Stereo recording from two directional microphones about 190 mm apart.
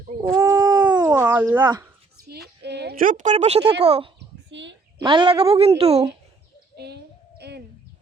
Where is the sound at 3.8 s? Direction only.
30° right (ahead or behind).